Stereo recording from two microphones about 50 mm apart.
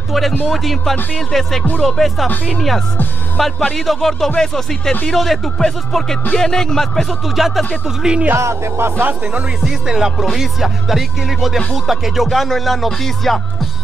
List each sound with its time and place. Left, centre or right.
0.5 s speech: centre
8.0 s music: centre
8.4 s music: right
9.6 s music: centre
10.2 s speech: centre